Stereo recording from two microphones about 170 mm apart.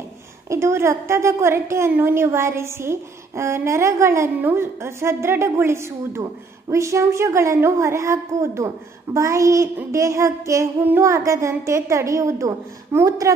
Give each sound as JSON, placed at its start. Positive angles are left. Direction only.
{"t": 0.5, "sound": "a woman's voice", "side_deg": -15}